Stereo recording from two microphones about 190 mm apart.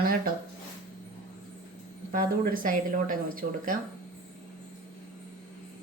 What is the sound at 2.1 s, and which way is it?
A woman's voice, 45° right (ahead or behind).